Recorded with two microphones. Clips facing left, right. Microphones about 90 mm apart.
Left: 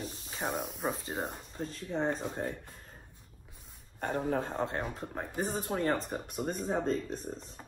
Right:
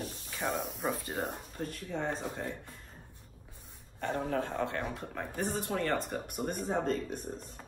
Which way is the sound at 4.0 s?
45° left (ahead or behind).